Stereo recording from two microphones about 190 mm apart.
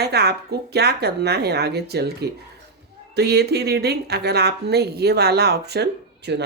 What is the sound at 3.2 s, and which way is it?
A woman's voice, 60° right (ahead or behind).